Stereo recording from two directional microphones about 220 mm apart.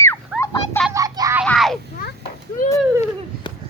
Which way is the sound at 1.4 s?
Centre (ahead or behind).